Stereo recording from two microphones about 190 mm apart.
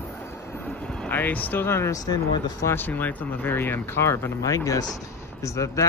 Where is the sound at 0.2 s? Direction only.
10° left (ahead or behind).